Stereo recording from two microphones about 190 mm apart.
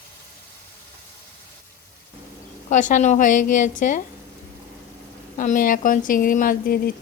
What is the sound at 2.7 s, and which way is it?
Speech, 40° left (ahead or behind).